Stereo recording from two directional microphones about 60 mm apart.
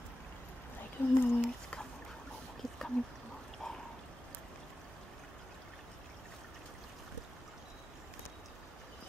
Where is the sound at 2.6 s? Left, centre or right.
Centre.